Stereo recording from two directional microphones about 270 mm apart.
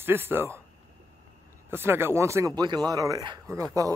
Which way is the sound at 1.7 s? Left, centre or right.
Centre.